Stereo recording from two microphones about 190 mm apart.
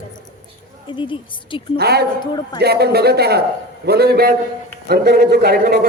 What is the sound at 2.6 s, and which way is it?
A man's voice, 55° right (ahead or behind).